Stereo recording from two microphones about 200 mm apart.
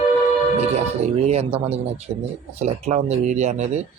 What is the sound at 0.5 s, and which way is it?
Speech, 30° right (ahead or behind).